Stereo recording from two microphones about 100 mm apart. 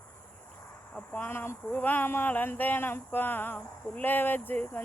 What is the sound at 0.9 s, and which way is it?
Speech, 15° left (ahead or behind).